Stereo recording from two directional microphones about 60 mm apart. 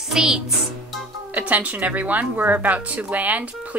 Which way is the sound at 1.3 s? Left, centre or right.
Right.